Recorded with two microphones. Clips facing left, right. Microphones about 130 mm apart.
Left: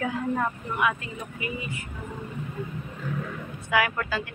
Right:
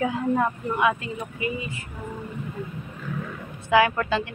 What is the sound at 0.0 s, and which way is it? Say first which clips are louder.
Speech: right 4 dB; 20° right (ahead or behind).